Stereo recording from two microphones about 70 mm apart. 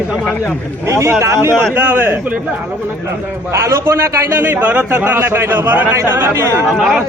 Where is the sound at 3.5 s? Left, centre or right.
Right.